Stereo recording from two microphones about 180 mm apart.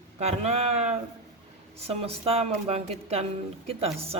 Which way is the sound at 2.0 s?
35° right (ahead or behind).